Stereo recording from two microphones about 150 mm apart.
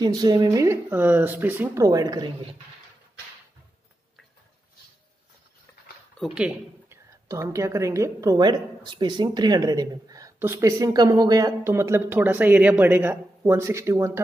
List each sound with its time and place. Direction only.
0.0 s speech: 25° right (ahead or behind)
1.9 s a woman's voice: 25° right (ahead or behind)
6.1 s speech: 5° right (ahead or behind)
7.2 s a woman's voice: 20° right (ahead or behind)